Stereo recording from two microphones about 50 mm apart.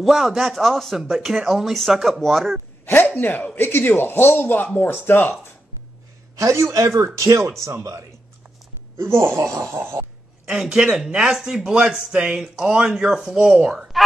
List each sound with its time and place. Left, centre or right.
0.0 s speech: centre
2.8 s speech: left
3.2 s speech: left
3.6 s a man's voice: left
6.3 s a man's voice: right
8.9 s speech: right
9.7 s speech: right
10.4 s a man's voice: centre